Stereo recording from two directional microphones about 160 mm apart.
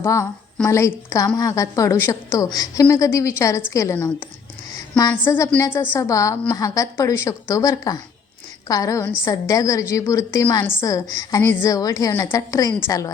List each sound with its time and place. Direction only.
0.0 s a woman's voice: 20° left (ahead or behind)
5.2 s a woman's voice: 10° left (ahead or behind)